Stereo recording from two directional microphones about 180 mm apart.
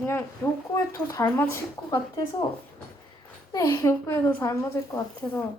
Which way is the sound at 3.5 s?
20° left (ahead or behind).